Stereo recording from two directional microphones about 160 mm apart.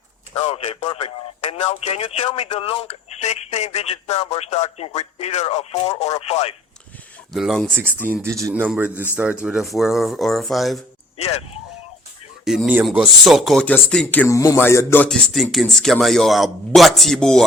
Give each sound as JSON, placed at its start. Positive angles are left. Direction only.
{"t": 0.3, "sound": "speech", "side_deg": 35}
{"t": 7.3, "sound": "speech", "side_deg": 0}
{"t": 8.0, "sound": "speech", "side_deg": -15}
{"t": 11.2, "sound": "speech", "side_deg": 40}
{"t": 12.5, "sound": "speech", "side_deg": -5}